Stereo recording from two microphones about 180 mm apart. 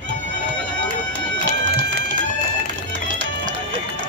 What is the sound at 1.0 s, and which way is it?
Run, 85° right.